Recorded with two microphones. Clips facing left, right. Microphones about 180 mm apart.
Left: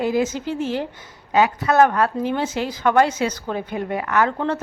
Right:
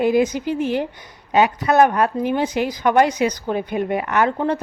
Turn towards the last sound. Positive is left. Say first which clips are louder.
# right 1 dB
turn(degrees=-15)  # may be behind; listen again after turning